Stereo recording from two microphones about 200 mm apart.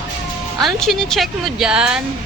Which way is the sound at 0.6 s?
Centre (ahead or behind).